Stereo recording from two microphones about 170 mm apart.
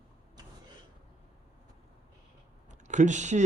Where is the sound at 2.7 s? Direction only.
45° right (ahead or behind).